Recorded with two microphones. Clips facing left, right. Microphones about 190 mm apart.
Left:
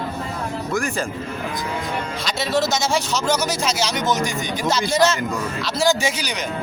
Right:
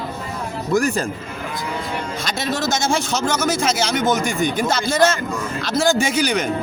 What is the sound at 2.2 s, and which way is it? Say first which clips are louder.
A man's voice: left 2 dB; 50° right (ahead or behind).